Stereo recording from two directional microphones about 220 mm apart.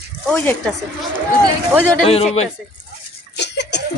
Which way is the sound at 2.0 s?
30° left (ahead or behind).